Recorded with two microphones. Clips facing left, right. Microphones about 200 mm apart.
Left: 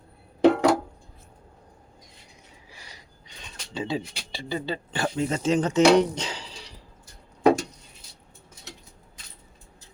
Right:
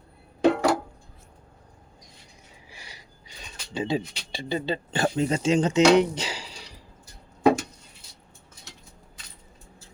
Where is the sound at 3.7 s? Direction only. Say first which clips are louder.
Right 2 dB; 15° right (ahead or behind).